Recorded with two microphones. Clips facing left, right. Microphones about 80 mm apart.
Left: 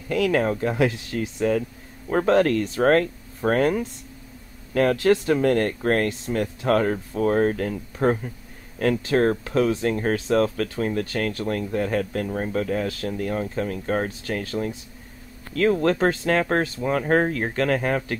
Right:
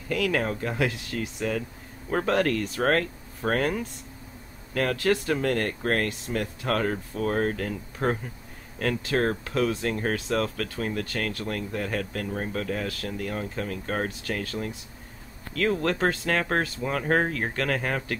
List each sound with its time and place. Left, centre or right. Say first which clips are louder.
0.1 s speech: left 5 dB; centre
15.8 s speech: left 5 dB; centre